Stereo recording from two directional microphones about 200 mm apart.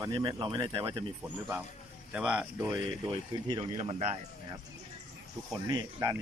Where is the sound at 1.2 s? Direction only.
10° right (ahead or behind).